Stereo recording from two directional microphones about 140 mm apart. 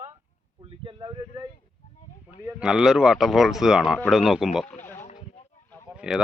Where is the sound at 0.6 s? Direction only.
35° right (ahead or behind).